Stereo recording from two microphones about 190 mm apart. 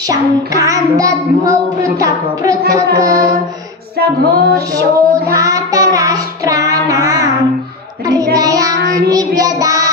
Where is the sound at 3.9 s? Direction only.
55° right (ahead or behind).